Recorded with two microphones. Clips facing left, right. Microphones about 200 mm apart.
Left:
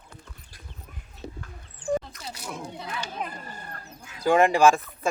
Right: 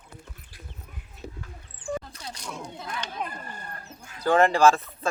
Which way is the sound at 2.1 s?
5° left (ahead or behind).